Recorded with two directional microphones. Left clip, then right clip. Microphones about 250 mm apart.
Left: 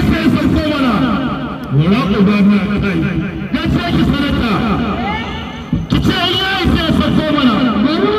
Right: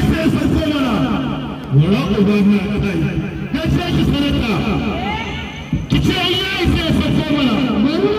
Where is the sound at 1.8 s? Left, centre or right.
Centre.